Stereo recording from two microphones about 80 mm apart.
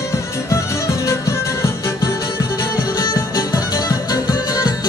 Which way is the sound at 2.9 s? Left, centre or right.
Left.